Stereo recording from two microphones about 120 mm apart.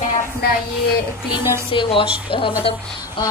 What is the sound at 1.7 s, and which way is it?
Speech, 45° left (ahead or behind).